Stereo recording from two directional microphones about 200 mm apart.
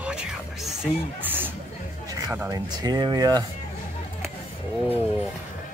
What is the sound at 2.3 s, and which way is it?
Speech, 10° right (ahead or behind).